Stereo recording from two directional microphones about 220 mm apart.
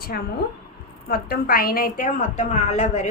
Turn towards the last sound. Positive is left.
turn(degrees=30)  # may be behind; listen again after turning